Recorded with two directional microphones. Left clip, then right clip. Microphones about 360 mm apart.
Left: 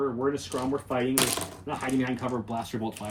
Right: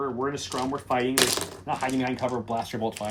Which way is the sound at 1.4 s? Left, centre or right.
Centre.